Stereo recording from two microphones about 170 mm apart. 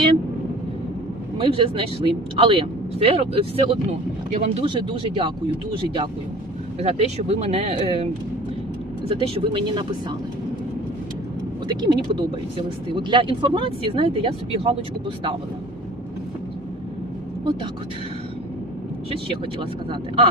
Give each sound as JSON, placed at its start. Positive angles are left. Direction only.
{"t": 1.4, "sound": "speech", "side_deg": -30}
{"t": 4.3, "sound": "speech", "side_deg": -45}
{"t": 4.6, "sound": "speech", "side_deg": -30}
{"t": 9.0, "sound": "speech", "side_deg": -30}
{"t": 11.7, "sound": "speech", "side_deg": -25}
{"t": 19.1, "sound": "speech", "side_deg": -30}